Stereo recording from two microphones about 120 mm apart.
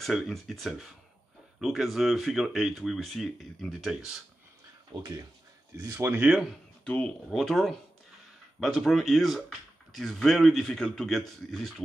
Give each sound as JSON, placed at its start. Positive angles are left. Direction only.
{"t": 0.0, "sound": "speech", "side_deg": 0}
{"t": 4.9, "sound": "speech", "side_deg": -45}
{"t": 5.8, "sound": "speech", "side_deg": -25}
{"t": 6.5, "sound": "speech", "side_deg": 10}